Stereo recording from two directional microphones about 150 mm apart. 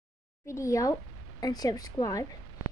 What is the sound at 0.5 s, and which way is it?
A woman's voice, 20° left (ahead or behind).